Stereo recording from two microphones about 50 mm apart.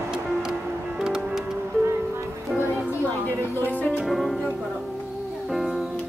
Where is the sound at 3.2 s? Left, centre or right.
Left.